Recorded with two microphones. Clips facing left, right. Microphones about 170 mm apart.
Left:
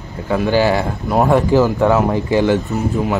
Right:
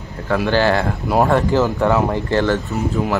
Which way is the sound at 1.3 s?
10° left (ahead or behind).